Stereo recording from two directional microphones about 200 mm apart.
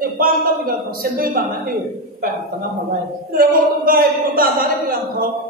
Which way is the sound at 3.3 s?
45° right (ahead or behind).